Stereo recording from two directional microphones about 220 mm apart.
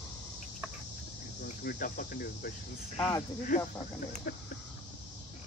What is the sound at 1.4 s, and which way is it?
Cricket, 40° left (ahead or behind).